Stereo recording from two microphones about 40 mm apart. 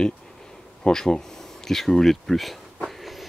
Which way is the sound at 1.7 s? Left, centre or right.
Centre.